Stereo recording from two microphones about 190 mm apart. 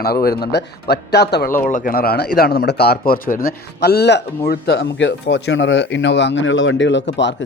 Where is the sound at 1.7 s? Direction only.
45° left (ahead or behind).